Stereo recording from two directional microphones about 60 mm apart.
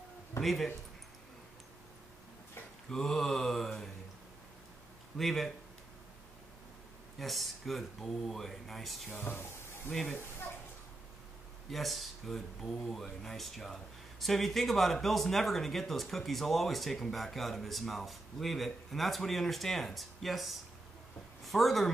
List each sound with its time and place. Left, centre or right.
0.4 s speech: centre
2.9 s mantra: centre
5.1 s speech: centre
7.2 s speech: centre
9.1 s music: left
11.7 s speech: centre